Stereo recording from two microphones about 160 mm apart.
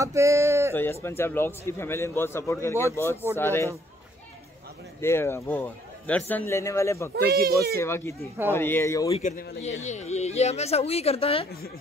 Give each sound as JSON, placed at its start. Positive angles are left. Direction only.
{"t": 0.0, "sound": "speech", "side_deg": -20}
{"t": 0.7, "sound": "a man's voice", "side_deg": 15}
{"t": 5.0, "sound": "a man's voice", "side_deg": 15}
{"t": 7.2, "sound": "speech", "side_deg": -70}
{"t": 7.7, "sound": "a man's voice", "side_deg": 15}
{"t": 9.2, "sound": "a man's voice", "side_deg": 65}
{"t": 9.6, "sound": "a woman's voice", "side_deg": 45}